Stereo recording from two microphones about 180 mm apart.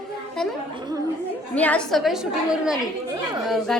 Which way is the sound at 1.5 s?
5° left (ahead or behind).